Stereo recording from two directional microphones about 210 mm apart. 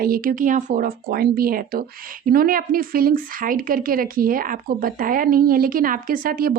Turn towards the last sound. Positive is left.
turn(degrees=-45)  # may be behind; listen again after turning